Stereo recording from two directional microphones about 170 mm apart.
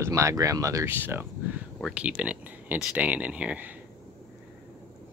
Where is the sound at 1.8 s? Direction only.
Centre (ahead or behind).